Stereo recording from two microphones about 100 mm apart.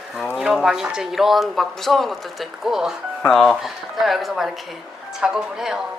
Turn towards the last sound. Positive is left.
turn(degrees=-5)  # may be behind; listen again after turning